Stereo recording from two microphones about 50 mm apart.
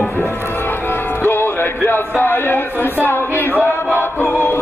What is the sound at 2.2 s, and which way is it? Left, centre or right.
Speech, left.